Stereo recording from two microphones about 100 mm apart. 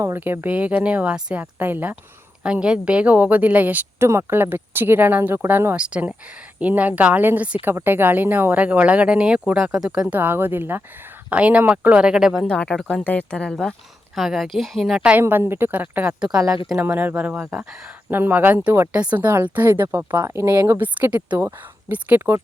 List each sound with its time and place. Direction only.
0.0 s speech: 25° right (ahead or behind)
10.2 s speech: 20° right (ahead or behind)
12.5 s speech: 10° left (ahead or behind)
14.2 s a woman's voice: centre (ahead or behind)
15.2 s speech: 25° right (ahead or behind)
16.2 s speech: 5° right (ahead or behind)
16.8 s speech: 20° right (ahead or behind)